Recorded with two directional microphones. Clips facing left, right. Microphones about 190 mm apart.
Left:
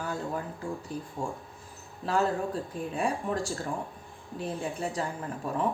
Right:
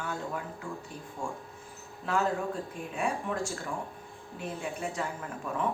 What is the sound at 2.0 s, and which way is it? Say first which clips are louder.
A woman's voice: left 2 dB; 35° left (ahead or behind).